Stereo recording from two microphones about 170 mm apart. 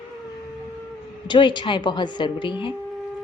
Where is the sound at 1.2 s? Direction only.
25° left (ahead or behind).